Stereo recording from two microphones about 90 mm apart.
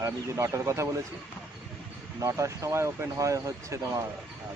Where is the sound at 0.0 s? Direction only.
35° right (ahead or behind).